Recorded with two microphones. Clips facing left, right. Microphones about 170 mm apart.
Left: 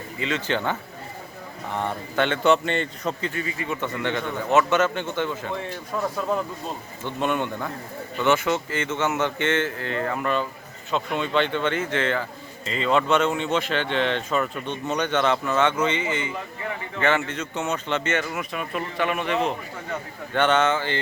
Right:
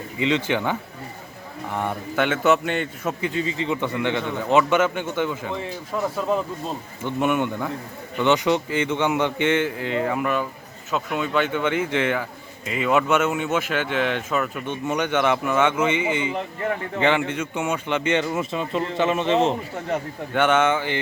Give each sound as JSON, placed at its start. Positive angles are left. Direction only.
{"t": 0.2, "sound": "speech", "side_deg": -15}
{"t": 18.2, "sound": "speech", "side_deg": -25}
{"t": 20.3, "sound": "speech", "side_deg": -10}